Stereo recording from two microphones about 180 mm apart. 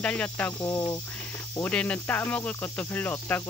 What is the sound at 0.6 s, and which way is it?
Speech, 20° left (ahead or behind).